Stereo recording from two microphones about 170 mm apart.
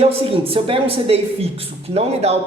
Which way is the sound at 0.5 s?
35° right (ahead or behind).